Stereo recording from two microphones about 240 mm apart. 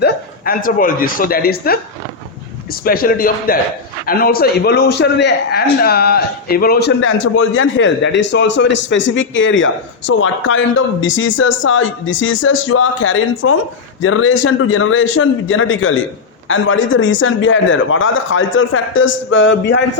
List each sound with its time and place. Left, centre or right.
0.0 s speech: left
2.8 s a man's voice: left